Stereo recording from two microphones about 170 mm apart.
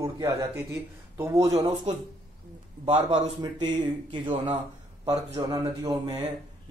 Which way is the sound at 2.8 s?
40° right (ahead or behind).